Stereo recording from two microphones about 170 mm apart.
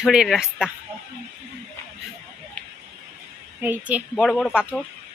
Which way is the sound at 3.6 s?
10° right (ahead or behind).